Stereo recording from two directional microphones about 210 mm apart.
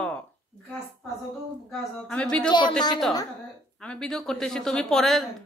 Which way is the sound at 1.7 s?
5° left (ahead or behind).